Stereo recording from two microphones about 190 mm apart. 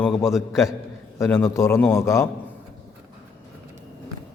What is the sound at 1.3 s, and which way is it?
Speech, 15° left (ahead or behind).